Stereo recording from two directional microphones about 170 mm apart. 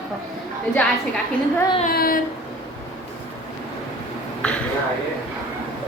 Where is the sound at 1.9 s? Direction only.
60° left (ahead or behind).